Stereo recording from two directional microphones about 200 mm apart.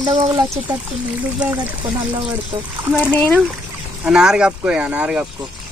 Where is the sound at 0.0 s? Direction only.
20° right (ahead or behind).